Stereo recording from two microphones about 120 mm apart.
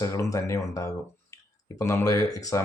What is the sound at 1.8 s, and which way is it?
Speech, 25° left (ahead or behind).